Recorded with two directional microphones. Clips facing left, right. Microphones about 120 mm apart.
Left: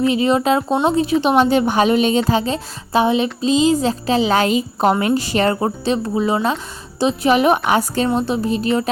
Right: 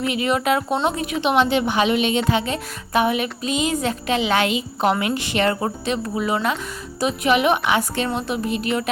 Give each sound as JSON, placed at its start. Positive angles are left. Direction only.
{"t": 0.0, "sound": "a woman's voice", "side_deg": 30}